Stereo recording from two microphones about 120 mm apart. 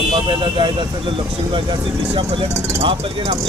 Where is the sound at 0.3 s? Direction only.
45° right (ahead or behind).